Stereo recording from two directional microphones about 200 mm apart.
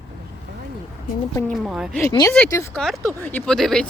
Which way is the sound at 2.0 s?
15° left (ahead or behind).